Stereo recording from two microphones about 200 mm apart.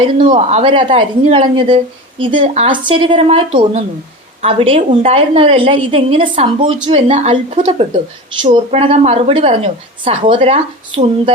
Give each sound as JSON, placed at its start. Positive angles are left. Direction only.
{"t": 0.2, "sound": "a woman's voice", "side_deg": -25}